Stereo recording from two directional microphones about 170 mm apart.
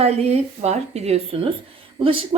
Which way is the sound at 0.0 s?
40° right (ahead or behind).